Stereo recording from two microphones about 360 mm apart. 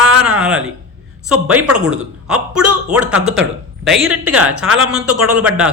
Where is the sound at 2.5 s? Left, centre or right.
Right.